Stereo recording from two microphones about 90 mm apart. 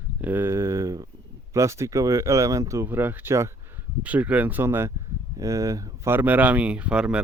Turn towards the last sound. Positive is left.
turn(degrees=-10)  # may be behind; listen again after turning